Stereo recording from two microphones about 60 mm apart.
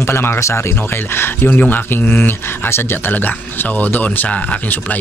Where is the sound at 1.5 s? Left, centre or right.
Left.